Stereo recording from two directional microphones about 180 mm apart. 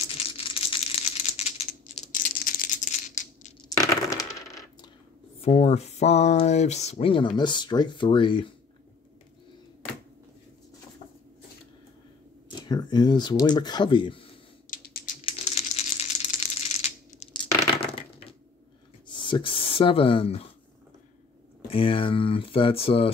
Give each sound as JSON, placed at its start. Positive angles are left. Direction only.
{"t": 0.0, "sound": "computer keyboard", "side_deg": 30}
{"t": 2.1, "sound": "rattle", "side_deg": 50}
{"t": 3.8, "sound": "coin", "side_deg": 20}
{"t": 5.4, "sound": "speech", "side_deg": 35}
{"t": 12.6, "sound": "speech", "side_deg": 25}
{"t": 14.7, "sound": "typing", "side_deg": 55}
{"t": 15.4, "sound": "a sound", "side_deg": 35}
{"t": 19.0, "sound": "speech", "side_deg": 25}
{"t": 21.6, "sound": "speech", "side_deg": 30}